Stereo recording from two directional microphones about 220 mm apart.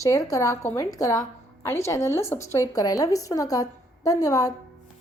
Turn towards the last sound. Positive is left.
turn(degrees=15)  # may be behind; listen again after turning